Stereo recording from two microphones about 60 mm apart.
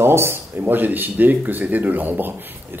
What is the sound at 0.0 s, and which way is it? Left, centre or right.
A man's voice, right.